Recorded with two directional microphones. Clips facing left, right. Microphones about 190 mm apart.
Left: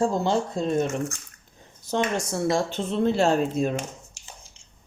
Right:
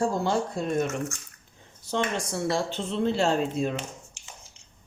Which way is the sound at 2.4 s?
50° left (ahead or behind).